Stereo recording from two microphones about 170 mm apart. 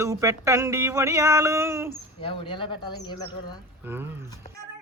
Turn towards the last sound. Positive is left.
turn(degrees=-15)  # may be behind; listen again after turning